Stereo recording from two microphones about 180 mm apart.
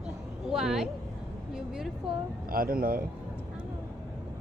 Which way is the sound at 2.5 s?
55° right (ahead or behind).